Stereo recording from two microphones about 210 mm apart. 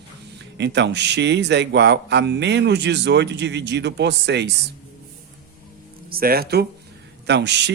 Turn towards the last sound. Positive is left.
turn(degrees=-55)  # may be behind; listen again after turning